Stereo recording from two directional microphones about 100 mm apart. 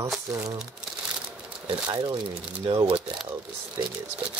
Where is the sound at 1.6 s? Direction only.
45° right (ahead or behind).